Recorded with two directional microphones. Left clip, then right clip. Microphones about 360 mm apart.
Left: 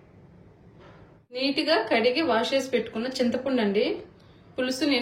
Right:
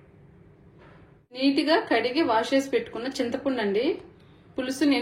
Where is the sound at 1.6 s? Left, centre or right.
Centre.